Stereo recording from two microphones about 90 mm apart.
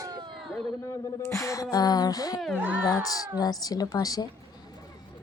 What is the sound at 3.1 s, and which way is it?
Speech, 45° left (ahead or behind).